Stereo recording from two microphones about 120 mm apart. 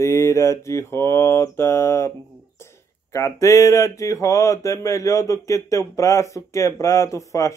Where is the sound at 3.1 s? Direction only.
25° left (ahead or behind).